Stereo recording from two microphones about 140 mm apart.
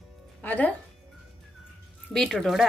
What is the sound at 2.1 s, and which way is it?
Speech, 5° left (ahead or behind).